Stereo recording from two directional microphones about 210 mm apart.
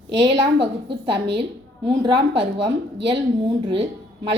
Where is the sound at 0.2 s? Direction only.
25° right (ahead or behind).